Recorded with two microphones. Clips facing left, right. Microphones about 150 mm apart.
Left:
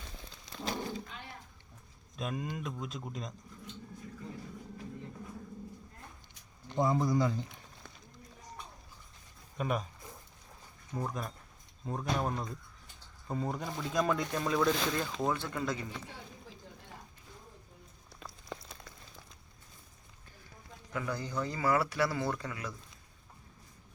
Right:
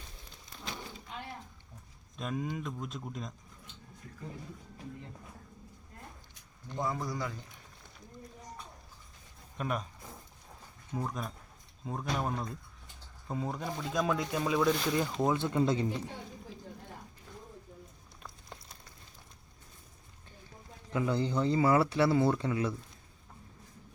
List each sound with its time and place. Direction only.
0.6 s a sound: 40° left (ahead or behind)
2.1 s speech: centre (ahead or behind)
6.7 s speech: 25° left (ahead or behind)
9.6 s speech: 5° left (ahead or behind)
10.9 s speech: centre (ahead or behind); by 16.0 s 25° right (ahead or behind)
20.9 s speech: 25° right (ahead or behind)